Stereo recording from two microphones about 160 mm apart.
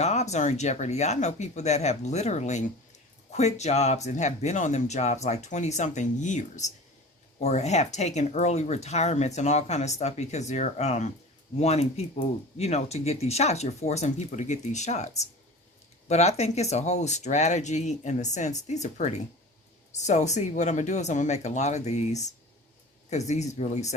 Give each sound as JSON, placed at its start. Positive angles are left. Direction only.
{"t": 0.0, "sound": "speech", "side_deg": 45}